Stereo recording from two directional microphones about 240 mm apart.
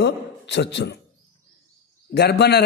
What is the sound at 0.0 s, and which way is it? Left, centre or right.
Speech, left.